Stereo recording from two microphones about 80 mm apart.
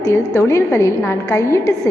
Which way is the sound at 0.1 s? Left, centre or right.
Left.